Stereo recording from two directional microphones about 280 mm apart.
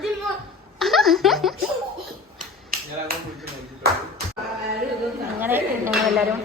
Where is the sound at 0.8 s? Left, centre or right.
Centre.